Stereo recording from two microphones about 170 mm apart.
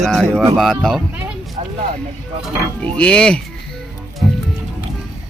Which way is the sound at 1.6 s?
40° right (ahead or behind).